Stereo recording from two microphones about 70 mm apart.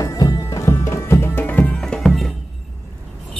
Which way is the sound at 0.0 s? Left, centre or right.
Left.